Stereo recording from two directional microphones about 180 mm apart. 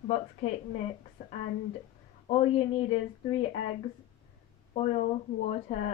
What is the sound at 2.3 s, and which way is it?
Speech, 30° left (ahead or behind).